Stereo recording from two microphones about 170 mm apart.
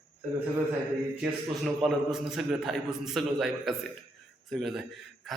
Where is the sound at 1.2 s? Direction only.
Centre (ahead or behind).